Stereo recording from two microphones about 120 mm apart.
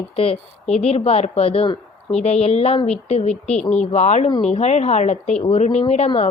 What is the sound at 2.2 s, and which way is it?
A woman's voice, 65° left (ahead or behind).